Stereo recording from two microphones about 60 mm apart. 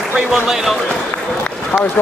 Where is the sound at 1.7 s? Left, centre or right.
Left.